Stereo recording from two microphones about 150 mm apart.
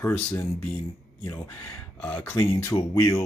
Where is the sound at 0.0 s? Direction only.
15° left (ahead or behind).